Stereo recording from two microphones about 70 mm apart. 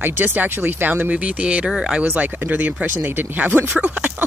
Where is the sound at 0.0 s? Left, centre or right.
Right; by 2.0 s centre.